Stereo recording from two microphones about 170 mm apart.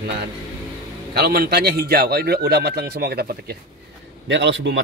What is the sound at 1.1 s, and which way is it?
A man's voice, 65° right (ahead or behind).